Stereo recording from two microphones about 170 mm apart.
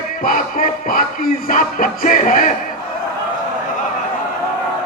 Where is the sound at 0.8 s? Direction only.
55° left (ahead or behind).